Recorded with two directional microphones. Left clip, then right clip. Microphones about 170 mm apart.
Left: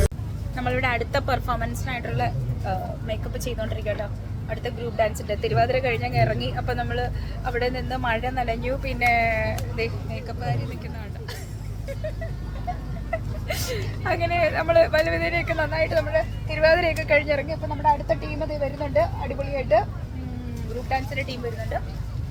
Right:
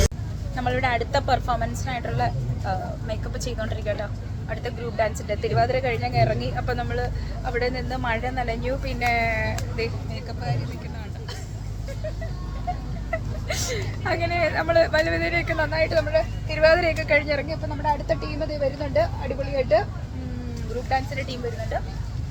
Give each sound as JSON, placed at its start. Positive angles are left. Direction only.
{"t": 0.5, "sound": "speech", "side_deg": 15}
{"t": 13.1, "sound": "speech", "side_deg": 10}
{"t": 19.5, "sound": "speech", "side_deg": 10}
{"t": 20.9, "sound": "speech", "side_deg": 20}